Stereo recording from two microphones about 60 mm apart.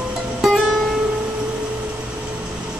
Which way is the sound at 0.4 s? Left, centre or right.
Centre.